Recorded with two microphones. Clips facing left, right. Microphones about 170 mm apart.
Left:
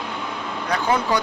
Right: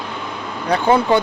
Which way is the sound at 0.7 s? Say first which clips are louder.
Right 6 dB; 30° right (ahead or behind).